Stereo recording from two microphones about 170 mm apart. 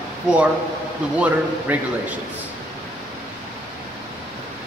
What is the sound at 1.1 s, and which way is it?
A man's voice, 10° right (ahead or behind).